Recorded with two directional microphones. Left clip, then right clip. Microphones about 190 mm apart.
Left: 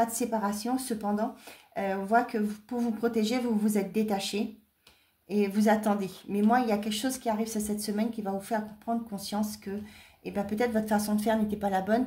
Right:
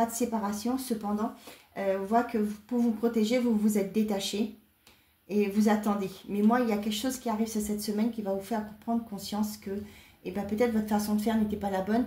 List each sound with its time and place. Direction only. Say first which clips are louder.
0.0 s a woman's voice: left 1 dB; 50° left (ahead or behind)